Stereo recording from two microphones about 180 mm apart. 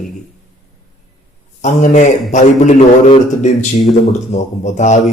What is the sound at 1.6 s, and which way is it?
A man's voice, 45° left (ahead or behind).